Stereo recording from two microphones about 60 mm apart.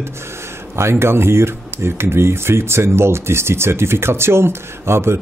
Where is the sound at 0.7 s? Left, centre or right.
Right.